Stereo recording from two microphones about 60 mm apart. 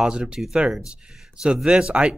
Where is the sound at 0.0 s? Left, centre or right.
Centre.